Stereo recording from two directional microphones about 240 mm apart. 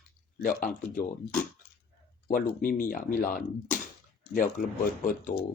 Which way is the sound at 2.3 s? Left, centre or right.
Left.